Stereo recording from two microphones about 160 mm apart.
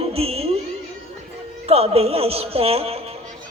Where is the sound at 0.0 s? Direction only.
40° right (ahead or behind).